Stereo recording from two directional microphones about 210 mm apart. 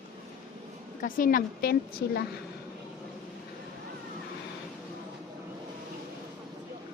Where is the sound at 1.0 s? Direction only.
40° left (ahead or behind).